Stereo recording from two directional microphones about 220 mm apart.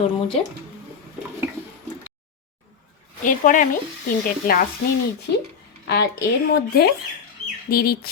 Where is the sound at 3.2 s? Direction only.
35° left (ahead or behind).